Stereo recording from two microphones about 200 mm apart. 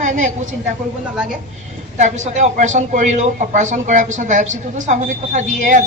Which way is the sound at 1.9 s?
40° right (ahead or behind).